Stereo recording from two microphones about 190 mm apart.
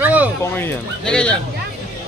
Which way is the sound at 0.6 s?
5° left (ahead or behind).